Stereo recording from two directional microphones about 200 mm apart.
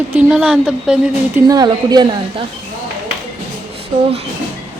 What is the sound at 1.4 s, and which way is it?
Speech, 20° right (ahead or behind).